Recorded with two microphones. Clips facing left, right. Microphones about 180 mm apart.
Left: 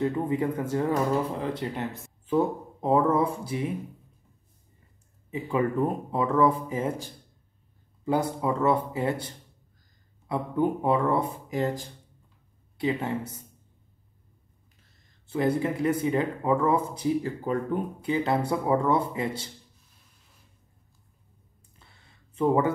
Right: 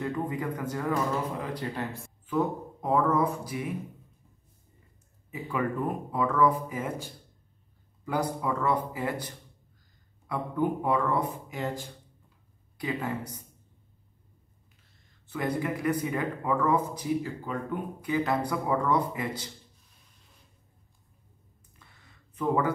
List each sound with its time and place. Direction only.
0.0 s speech: 25° left (ahead or behind)
5.3 s speech: 25° left (ahead or behind)
12.7 s speech: 25° left (ahead or behind)
15.2 s speech: 30° left (ahead or behind)
21.8 s a sound: 30° left (ahead or behind)
22.3 s speech: 25° left (ahead or behind)